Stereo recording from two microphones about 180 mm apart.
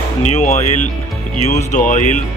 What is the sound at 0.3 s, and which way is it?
Speech, 40° left (ahead or behind).